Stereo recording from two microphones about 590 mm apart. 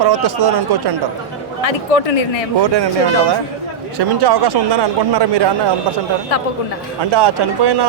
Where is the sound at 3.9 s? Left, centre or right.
Right.